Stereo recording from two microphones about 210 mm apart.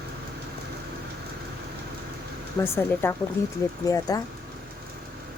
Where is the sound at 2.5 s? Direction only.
10° left (ahead or behind).